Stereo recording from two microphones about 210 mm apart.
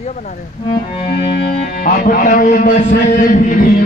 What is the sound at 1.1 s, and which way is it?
Speech, 50° left (ahead or behind).